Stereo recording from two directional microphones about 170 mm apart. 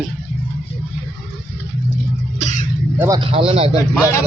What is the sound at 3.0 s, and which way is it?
Speech, 25° right (ahead or behind).